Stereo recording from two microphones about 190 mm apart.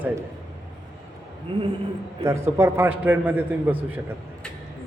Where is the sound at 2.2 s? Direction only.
15° right (ahead or behind).